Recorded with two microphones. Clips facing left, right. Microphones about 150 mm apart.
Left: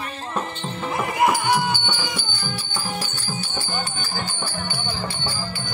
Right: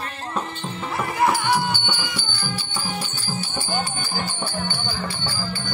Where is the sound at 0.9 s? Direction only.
15° left (ahead or behind).